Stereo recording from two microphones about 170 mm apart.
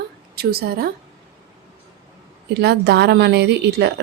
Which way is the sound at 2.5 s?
75° right (ahead or behind).